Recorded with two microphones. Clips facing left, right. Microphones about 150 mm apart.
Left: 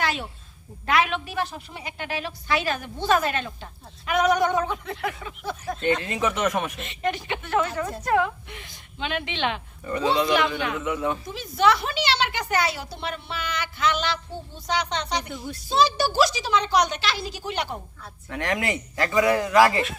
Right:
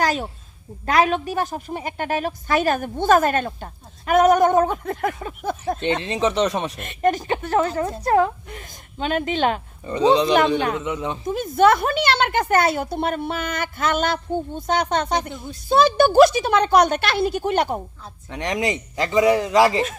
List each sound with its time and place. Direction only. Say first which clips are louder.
0.0 s a sound: right 6 dB; 40° right (ahead or behind)
0.9 s a woman's voice: right 5 dB; 40° right (ahead or behind)
5.8 s speech: right 2 dB; 25° right (ahead or behind)
6.7 s a woman's voice: right 7 dB; 50° right (ahead or behind)
9.8 s speech: right 6 dB; 20° right (ahead or behind)
11.3 s a woman's voice: right 7 dB; 50° right (ahead or behind)
18.0 s speech: right 2 dB; 20° right (ahead or behind)